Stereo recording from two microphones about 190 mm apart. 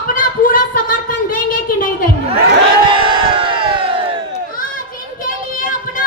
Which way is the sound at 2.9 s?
25° right (ahead or behind).